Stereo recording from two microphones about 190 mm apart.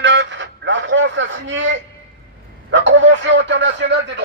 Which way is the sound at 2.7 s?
75° right (ahead or behind).